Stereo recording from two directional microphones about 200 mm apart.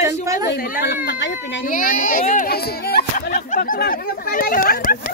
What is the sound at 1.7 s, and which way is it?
A child's voice, 40° left (ahead or behind).